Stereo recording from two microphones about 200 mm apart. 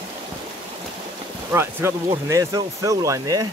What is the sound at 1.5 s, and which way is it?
Speech, 10° right (ahead or behind).